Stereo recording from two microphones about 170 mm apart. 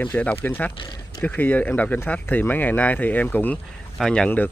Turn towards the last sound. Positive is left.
turn(degrees=5)  # may be behind; listen again after turning